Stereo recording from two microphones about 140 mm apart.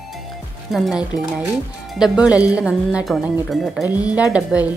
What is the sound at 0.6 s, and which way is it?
A woman's voice, centre (ahead or behind).